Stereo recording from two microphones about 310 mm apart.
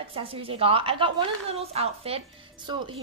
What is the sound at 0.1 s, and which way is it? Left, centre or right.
A woman's voice, centre.